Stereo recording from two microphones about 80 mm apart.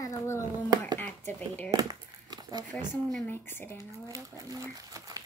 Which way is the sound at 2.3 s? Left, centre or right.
Right.